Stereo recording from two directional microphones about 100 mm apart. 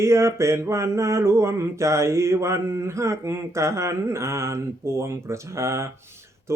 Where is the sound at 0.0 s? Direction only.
30° right (ahead or behind).